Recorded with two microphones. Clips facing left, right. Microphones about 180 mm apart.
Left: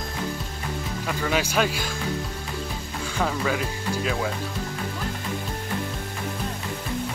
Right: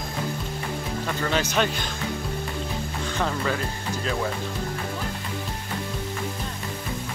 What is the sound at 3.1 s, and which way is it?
Speech, 5° left (ahead or behind).